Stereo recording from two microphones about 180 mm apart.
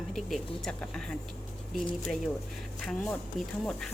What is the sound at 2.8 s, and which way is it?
Speech, centre (ahead or behind).